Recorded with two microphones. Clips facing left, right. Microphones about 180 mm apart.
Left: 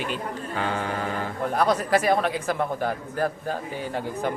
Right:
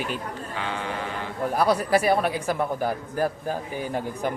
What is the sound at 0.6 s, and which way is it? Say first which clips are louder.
Mantra: left 3 dB; 45° left (ahead or behind).